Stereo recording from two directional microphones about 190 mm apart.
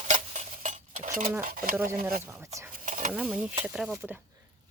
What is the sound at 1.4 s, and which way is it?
Speech, 45° right (ahead or behind).